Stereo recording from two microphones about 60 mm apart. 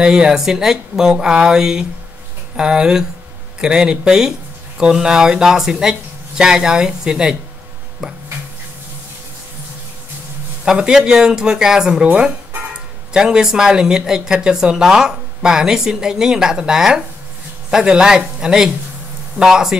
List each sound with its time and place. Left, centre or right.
0.0 s speech: centre
10.6 s speech: centre